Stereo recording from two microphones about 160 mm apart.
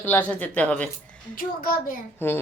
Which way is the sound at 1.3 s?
65° left (ahead or behind).